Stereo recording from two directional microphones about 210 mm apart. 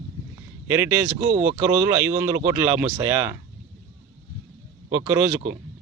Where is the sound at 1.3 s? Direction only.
30° right (ahead or behind).